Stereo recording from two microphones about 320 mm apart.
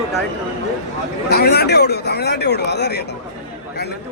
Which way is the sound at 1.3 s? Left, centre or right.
Left.